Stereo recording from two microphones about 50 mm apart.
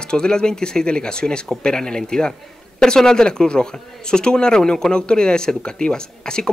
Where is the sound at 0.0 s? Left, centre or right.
Centre.